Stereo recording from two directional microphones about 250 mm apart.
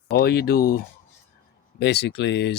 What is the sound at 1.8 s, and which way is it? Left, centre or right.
Speech, left.